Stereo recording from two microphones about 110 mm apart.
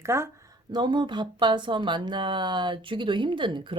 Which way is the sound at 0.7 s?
45° right (ahead or behind).